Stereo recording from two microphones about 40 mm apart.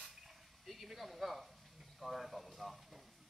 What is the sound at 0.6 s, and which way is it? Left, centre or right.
Speech, centre.